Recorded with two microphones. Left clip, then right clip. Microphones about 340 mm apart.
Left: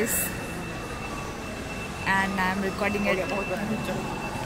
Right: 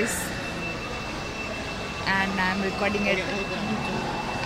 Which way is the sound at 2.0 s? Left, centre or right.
Centre.